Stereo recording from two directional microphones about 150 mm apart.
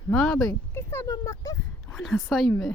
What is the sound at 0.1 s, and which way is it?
Speech, 10° left (ahead or behind).